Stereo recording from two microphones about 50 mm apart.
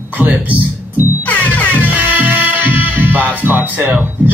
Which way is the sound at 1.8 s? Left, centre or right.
Right.